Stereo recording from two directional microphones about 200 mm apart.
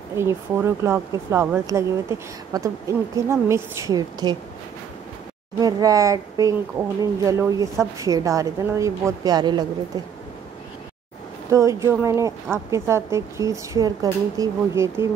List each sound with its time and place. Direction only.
0.2 s speech: 10° right (ahead or behind)
5.6 s speech: 20° right (ahead or behind)
11.5 s speech: 15° right (ahead or behind)